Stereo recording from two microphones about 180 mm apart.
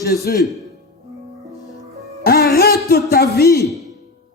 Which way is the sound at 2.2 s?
60° left (ahead or behind).